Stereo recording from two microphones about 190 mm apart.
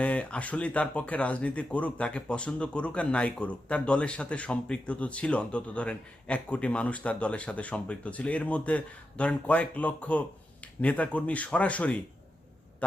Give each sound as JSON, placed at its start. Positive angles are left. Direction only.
{"t": 0.0, "sound": "speech", "side_deg": 5}